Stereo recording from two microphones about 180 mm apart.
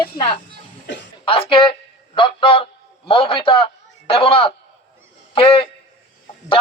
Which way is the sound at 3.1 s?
30° left (ahead or behind).